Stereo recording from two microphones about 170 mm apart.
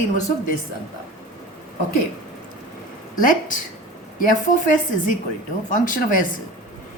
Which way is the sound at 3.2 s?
50° left (ahead or behind).